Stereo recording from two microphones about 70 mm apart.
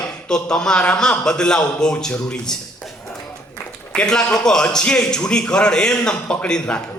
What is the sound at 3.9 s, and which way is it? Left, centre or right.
A man's voice, centre.